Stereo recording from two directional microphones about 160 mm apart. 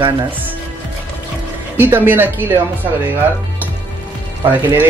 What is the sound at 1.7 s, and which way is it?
Speech, 10° right (ahead or behind).